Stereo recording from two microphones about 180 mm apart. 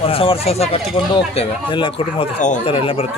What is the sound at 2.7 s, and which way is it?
Speech, 30° left (ahead or behind).